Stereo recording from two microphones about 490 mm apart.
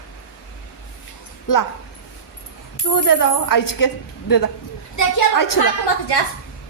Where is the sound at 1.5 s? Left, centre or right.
Left.